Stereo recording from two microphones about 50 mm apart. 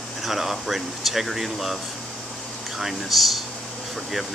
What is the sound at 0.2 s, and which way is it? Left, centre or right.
Speech, centre.